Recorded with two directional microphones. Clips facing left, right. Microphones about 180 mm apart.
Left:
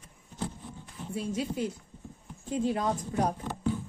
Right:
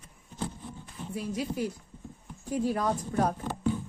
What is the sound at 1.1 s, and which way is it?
Speech, 25° left (ahead or behind).